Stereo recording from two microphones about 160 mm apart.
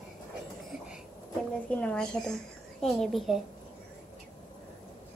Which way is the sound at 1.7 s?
10° left (ahead or behind).